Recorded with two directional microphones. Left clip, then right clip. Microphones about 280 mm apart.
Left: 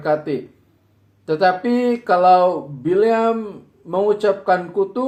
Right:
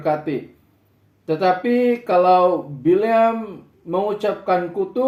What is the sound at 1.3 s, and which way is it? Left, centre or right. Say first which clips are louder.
Speech: left 1 dB; left.